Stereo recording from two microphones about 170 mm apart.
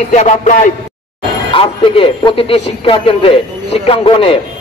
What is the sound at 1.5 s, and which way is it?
A man's voice, 30° left (ahead or behind).